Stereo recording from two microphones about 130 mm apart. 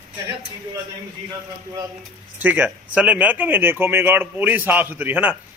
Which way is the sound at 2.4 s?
10° right (ahead or behind).